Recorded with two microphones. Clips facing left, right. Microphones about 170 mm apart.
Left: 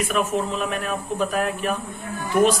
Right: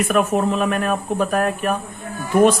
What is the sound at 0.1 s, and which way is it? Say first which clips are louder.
Speech: right 5 dB; 55° right (ahead or behind).